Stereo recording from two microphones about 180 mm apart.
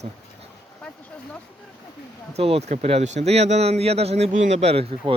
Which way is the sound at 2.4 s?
35° right (ahead or behind).